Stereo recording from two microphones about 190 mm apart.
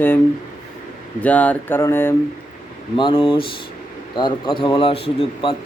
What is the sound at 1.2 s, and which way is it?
Speech, 5° left (ahead or behind).